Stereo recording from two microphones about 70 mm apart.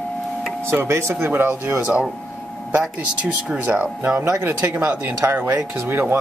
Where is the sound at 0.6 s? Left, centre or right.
Right.